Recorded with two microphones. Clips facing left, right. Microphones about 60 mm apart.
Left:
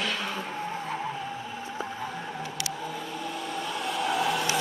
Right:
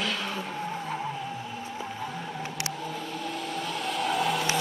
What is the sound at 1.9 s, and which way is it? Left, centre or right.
Vehicle, centre.